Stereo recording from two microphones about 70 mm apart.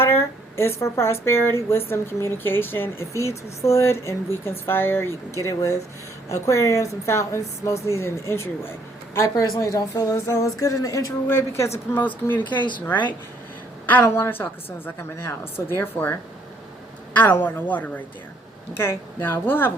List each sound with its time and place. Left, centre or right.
0.0 s speech: left
3.1 s speech: left
5.5 s a woman's voice: left
9.1 s a woman's voice: left
10.1 s a woman's voice: left
11.3 s speech: left
11.9 s speech: left
14.0 s speech: left
17.2 s speech: left
18.8 s speech: left